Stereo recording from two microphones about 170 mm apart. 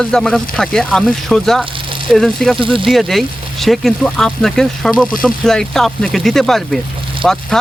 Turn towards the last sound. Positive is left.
turn(degrees=0)  # may be behind; listen again after turning